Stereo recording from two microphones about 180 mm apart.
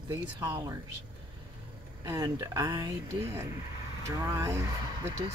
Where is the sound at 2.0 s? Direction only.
20° right (ahead or behind).